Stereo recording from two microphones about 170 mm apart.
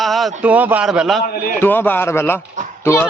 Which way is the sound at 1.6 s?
10° left (ahead or behind).